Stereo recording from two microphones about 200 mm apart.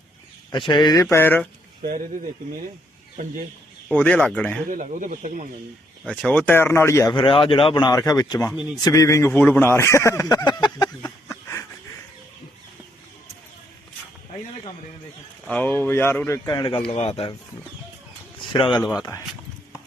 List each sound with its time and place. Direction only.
0.7 s speech: 20° left (ahead or behind)
1.1 s speech: 10° left (ahead or behind)
1.8 s speech: 45° right (ahead or behind)
3.8 s speech: 5° left (ahead or behind)
4.7 s speech: 40° right (ahead or behind)
6.1 s speech: 5° left (ahead or behind)
15.4 s speech: 5° left (ahead or behind); by 17.3 s 30° left (ahead or behind)
18.5 s speech: 25° left (ahead or behind)
18.8 s speech: centre (ahead or behind)